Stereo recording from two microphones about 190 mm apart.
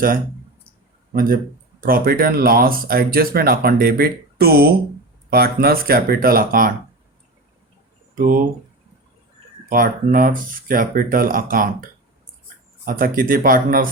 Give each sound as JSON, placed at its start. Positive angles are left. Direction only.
{"t": 1.1, "sound": "speech", "side_deg": -45}
{"t": 8.1, "sound": "speech", "side_deg": -45}
{"t": 9.6, "sound": "speech", "side_deg": -45}